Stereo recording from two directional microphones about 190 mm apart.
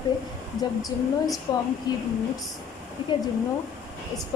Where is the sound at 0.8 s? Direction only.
20° left (ahead or behind).